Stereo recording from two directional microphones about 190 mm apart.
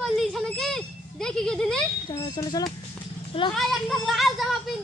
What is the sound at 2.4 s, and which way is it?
Speech, 20° left (ahead or behind).